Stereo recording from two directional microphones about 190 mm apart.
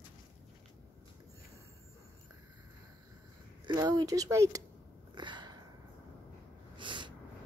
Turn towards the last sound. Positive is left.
turn(degrees=-25)  # may be behind; listen again after turning